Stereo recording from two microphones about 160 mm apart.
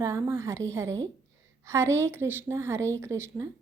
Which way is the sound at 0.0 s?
15° right (ahead or behind).